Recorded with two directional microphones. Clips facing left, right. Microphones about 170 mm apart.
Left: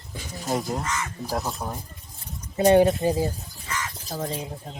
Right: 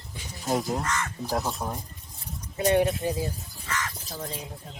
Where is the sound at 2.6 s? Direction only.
30° left (ahead or behind).